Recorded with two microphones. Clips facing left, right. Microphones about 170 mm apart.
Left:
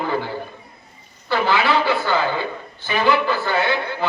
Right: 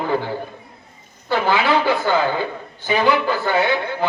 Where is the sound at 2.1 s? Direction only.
50° right (ahead or behind).